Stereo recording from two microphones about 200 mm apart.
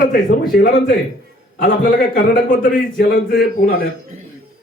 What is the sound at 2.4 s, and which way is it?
Speech, 45° left (ahead or behind).